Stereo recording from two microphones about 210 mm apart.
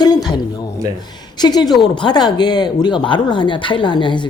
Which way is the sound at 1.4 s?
20° left (ahead or behind).